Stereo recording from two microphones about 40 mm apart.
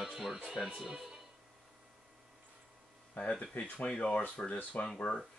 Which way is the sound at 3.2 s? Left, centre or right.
Left.